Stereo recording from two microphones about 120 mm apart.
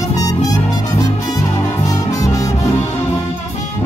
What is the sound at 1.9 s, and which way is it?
Music, 25° left (ahead or behind).